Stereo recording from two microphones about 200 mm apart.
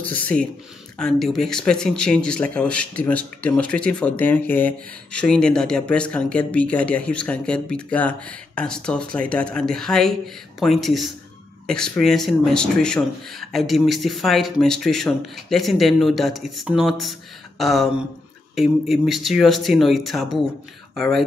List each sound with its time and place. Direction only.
0.1 s speech: 5° left (ahead or behind)